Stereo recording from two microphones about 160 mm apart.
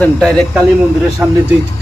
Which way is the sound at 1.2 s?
5° right (ahead or behind).